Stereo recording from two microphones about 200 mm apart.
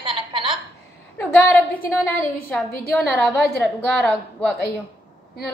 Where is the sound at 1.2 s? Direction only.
10° left (ahead or behind).